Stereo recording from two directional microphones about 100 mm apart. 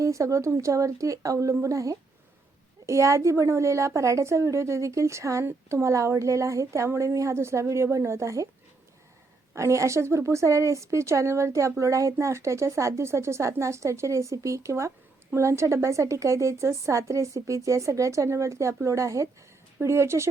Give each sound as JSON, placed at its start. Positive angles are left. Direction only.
{"t": 0.0, "sound": "a woman's voice", "side_deg": -30}
{"t": 9.6, "sound": "a woman's voice", "side_deg": -30}